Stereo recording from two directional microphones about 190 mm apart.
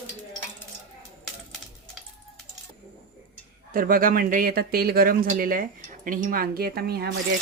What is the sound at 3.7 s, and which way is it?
Speech, 50° right (ahead or behind).